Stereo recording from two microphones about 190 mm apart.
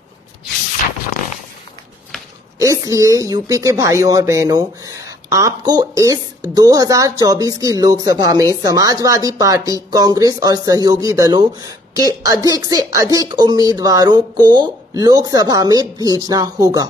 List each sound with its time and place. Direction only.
2.6 s speech: 15° right (ahead or behind)